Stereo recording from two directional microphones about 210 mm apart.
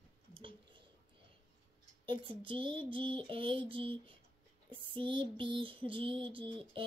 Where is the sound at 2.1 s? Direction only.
25° right (ahead or behind).